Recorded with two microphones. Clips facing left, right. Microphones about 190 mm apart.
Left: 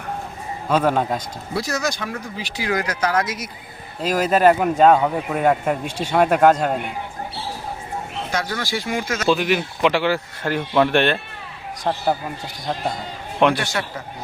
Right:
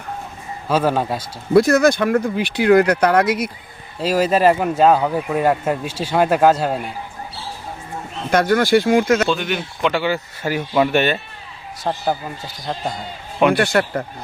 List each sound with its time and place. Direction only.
0.7 s a man's voice: 5° right (ahead or behind)
1.5 s speech: 55° right (ahead or behind)
4.1 s speech: 5° right (ahead or behind)
8.3 s speech: 55° right (ahead or behind)
9.3 s a man's voice: 5° left (ahead or behind)
13.5 s speech: 60° right (ahead or behind)